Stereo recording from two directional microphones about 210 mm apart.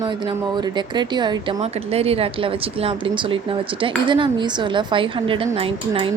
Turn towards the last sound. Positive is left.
turn(degrees=-25)  # may be behind; listen again after turning